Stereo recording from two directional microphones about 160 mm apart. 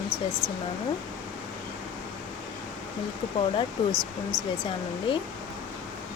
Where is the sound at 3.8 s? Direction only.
30° left (ahead or behind).